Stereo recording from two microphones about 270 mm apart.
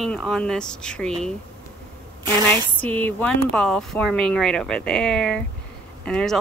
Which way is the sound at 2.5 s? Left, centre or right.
Centre.